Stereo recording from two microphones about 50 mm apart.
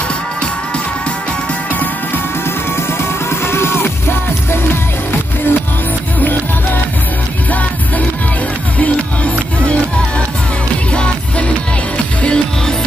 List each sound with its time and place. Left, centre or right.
3.3 s music: left
8.7 s music: left
10.9 s music: left